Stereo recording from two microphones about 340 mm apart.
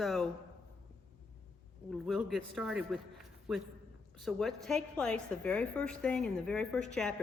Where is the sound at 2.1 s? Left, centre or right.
Centre.